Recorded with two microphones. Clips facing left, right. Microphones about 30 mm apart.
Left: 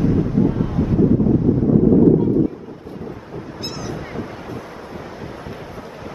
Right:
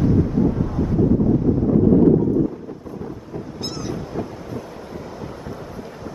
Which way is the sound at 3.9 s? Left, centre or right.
Left.